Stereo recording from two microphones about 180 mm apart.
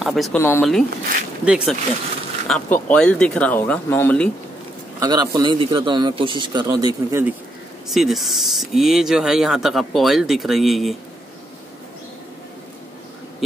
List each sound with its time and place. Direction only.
0.0 s speech: centre (ahead or behind)
0.4 s speech: 15° left (ahead or behind)
1.4 s speech: 5° right (ahead or behind)
2.4 s speech: 5° left (ahead or behind)
5.0 s speech: 20° right (ahead or behind)
7.9 s speech: centre (ahead or behind)